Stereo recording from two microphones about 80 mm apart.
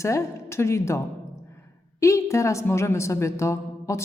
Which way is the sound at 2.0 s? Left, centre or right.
Left.